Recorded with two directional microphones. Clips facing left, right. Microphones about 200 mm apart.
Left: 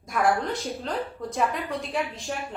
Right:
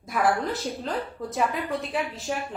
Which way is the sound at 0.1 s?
5° right (ahead or behind).